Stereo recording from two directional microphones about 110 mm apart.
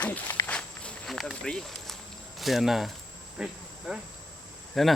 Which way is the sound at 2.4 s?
Centre (ahead or behind).